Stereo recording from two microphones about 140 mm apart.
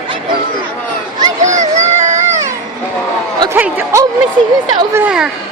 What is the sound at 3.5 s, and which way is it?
Speech, 15° right (ahead or behind).